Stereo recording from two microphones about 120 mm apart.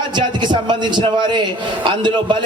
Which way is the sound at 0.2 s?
40° right (ahead or behind).